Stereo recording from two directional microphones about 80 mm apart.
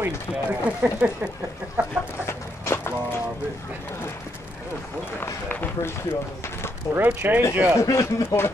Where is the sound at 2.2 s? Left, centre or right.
Left.